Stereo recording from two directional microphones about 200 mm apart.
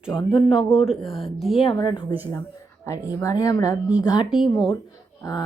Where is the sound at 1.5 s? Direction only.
25° left (ahead or behind).